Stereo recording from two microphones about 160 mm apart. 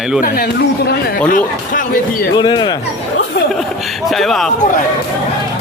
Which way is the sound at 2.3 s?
25° left (ahead or behind).